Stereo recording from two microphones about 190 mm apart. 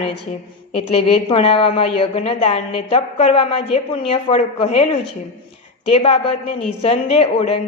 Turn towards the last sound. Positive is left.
turn(degrees=35)  # may be behind; listen again after turning